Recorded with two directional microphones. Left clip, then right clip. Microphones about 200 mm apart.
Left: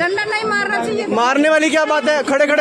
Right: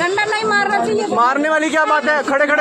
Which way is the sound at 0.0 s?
20° left (ahead or behind).